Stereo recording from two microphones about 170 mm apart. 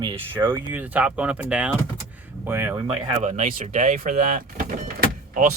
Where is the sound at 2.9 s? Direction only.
40° right (ahead or behind).